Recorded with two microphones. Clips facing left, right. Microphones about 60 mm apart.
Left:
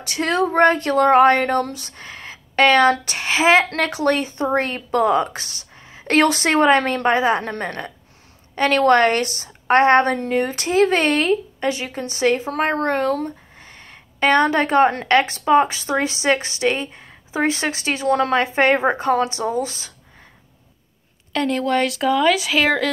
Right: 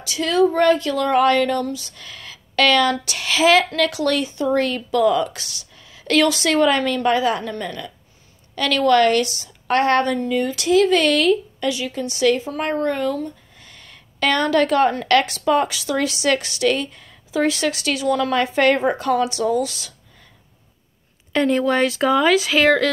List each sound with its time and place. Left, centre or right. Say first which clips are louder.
0.0 s speech: right 2 dB; left
2.0 s a woman's voice: left 3 dB; left
4.3 s speech: right 1 dB; left
4.6 s a woman's voice: even; left
10.0 s a woman's voice: left 1 dB; left
12.4 s speech: left 2 dB; left
13.6 s a sound: left 3 dB; left
15.0 s a woman's voice: left 1 dB; left
18.3 s speech: even; left
21.3 s speech: right 2 dB; centre